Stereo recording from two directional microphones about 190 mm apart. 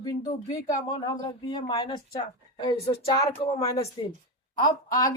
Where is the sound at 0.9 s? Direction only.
20° left (ahead or behind).